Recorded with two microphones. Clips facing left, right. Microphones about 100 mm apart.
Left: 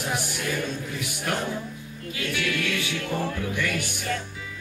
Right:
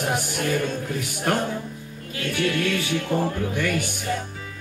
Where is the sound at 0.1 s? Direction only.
50° right (ahead or behind).